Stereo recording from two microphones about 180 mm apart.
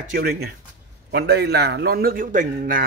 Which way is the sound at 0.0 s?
55° right (ahead or behind).